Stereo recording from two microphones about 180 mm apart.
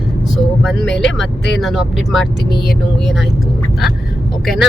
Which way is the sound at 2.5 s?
60° left (ahead or behind).